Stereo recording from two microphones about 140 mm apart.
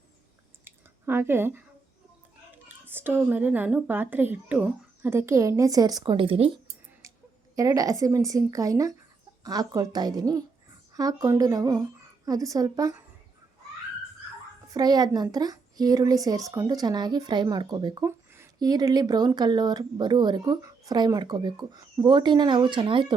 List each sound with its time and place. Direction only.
0.6 s drip: 15° right (ahead or behind)
2.6 s a woman's voice: 15° right (ahead or behind); by 6.6 s 40° right (ahead or behind)
7.0 s a sound: 20° right (ahead or behind)
7.5 s a woman's voice: 25° right (ahead or behind)
14.7 s a woman's voice: 25° right (ahead or behind)